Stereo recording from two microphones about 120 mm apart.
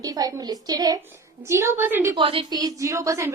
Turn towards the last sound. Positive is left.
turn(degrees=-25)  # may be behind; listen again after turning